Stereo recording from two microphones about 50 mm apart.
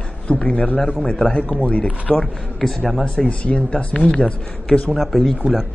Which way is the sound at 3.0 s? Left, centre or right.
Centre.